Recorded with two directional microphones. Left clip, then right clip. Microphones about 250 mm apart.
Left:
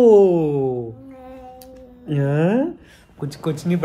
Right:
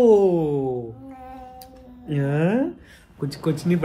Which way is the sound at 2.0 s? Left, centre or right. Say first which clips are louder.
Left 3 dB; left.